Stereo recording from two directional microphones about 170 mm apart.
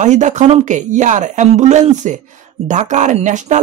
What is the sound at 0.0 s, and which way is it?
Speech, 45° right (ahead or behind).